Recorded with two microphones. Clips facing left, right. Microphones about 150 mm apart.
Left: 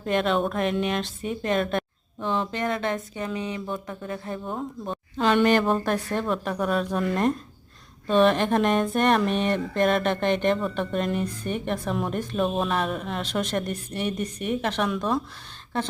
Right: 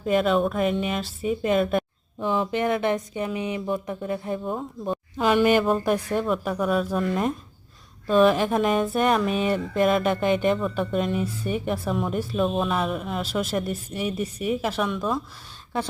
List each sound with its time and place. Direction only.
0.0 s speech: 5° right (ahead or behind)